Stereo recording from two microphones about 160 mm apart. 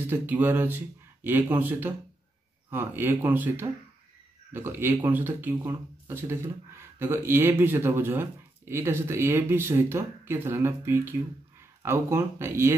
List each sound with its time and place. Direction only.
0.0 s speech: 10° right (ahead or behind)